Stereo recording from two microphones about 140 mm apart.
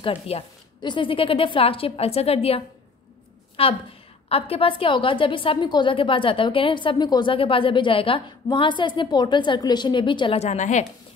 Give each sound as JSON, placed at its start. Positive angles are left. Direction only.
{"t": 0.0, "sound": "a woman's voice", "side_deg": 40}
{"t": 10.4, "sound": "a woman's voice", "side_deg": 55}